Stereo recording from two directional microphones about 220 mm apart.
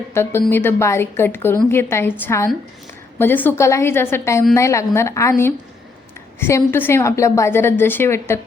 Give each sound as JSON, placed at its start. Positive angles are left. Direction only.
{"t": 0.1, "sound": "a woman's voice", "side_deg": 10}
{"t": 6.4, "sound": "a woman's voice", "side_deg": 10}